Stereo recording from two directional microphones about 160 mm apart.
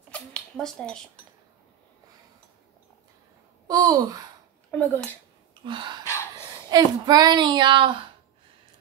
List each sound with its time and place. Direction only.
0.1 s a sound: 5° left (ahead or behind)
3.6 s speech: 25° right (ahead or behind)
4.6 s speech: 10° left (ahead or behind)
5.6 s speech: 30° right (ahead or behind)